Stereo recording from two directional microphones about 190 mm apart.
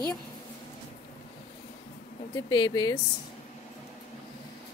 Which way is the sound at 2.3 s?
20° left (ahead or behind).